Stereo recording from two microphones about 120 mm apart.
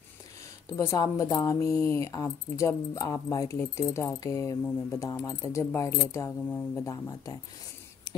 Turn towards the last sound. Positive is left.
turn(degrees=30)  # may be behind; listen again after turning